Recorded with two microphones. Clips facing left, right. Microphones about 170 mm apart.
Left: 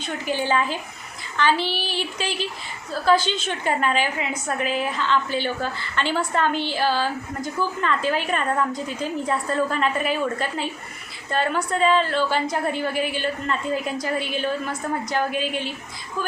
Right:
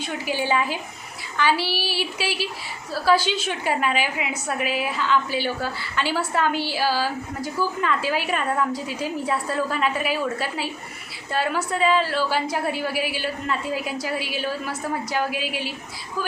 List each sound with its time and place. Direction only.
0.0 s a woman's voice: 10° right (ahead or behind)